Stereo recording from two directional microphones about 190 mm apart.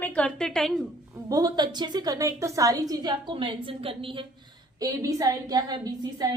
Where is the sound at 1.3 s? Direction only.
20° right (ahead or behind).